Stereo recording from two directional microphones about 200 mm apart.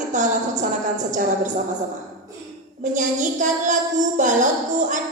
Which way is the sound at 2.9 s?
40° right (ahead or behind).